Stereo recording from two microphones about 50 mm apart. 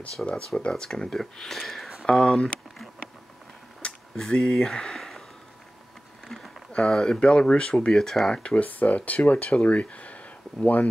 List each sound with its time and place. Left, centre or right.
0.2 s speech: left; by 1.9 s centre
2.0 s speech: centre
3.8 s a sound: left
4.2 s speech: centre
4.9 s a sound: centre
6.2 s a sound: centre
6.9 s speech: centre
8.4 s speech: left
8.6 s speech: left